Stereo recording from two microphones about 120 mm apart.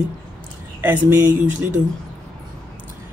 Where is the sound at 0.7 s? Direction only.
15° right (ahead or behind).